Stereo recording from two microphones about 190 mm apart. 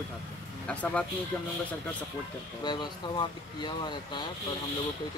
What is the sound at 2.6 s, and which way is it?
Speech, 25° left (ahead or behind).